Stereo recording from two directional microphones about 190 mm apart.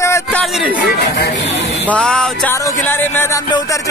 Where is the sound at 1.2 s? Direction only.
70° left (ahead or behind).